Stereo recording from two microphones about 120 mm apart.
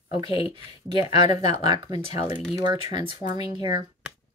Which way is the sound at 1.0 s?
35° right (ahead or behind).